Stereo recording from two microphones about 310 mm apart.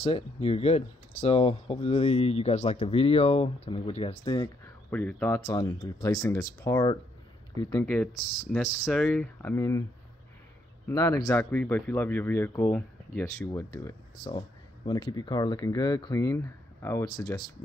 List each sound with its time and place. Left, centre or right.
0.0 s speech: centre
10.9 s speech: centre